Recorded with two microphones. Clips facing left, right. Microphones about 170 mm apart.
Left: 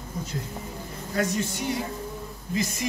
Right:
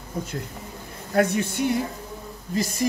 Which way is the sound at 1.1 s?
55° right (ahead or behind).